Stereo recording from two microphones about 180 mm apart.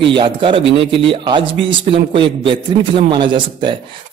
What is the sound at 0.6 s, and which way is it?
Speech, 85° right.